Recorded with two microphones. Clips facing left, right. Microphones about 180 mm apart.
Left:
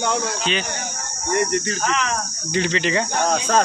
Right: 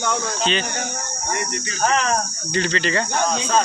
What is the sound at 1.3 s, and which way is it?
Cricket, 50° left (ahead or behind).